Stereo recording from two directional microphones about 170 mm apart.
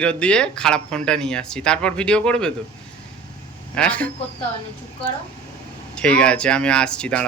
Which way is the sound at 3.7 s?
10° left (ahead or behind).